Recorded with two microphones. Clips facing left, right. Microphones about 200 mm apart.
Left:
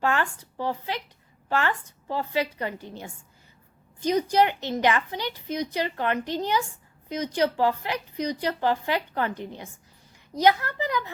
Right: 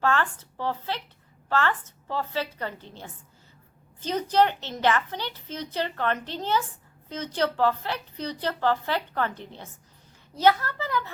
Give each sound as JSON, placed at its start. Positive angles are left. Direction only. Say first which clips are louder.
{"t": 0.0, "sound": "a woman's voice", "louder": "even", "side_deg": 15}